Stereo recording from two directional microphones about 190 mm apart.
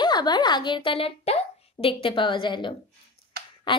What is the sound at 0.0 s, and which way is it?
A child's voice, 20° left (ahead or behind).